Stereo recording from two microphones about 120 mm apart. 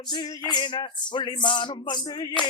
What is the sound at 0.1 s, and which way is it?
Speech, 40° left (ahead or behind).